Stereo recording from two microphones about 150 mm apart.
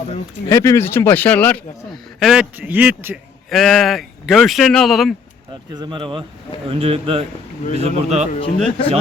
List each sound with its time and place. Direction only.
0.4 s speech: 20° left (ahead or behind)
1.9 s speech: centre (ahead or behind)
3.5 s a man's voice: centre (ahead or behind)
5.7 s speech: 30° right (ahead or behind)
8.5 s speech: 40° left (ahead or behind)